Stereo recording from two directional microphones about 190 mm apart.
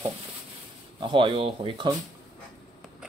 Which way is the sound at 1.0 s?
25° right (ahead or behind).